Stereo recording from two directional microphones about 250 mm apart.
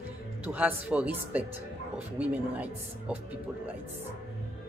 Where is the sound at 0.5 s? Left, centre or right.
Centre.